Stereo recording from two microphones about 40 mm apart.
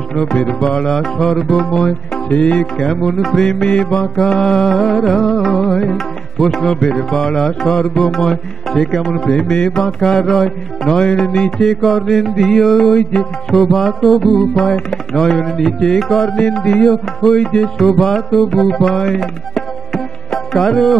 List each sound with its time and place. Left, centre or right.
0.1 s music: centre
2.2 s music: left
2.6 s music: centre
3.6 s mantra: centre
4.6 s music: centre
5.9 s tabla: centre
6.7 s music: centre
14.6 s music: centre
15.3 s music: centre
16.3 s mantra: left
16.8 s music: centre
17.7 s music: centre
19.1 s tabla: centre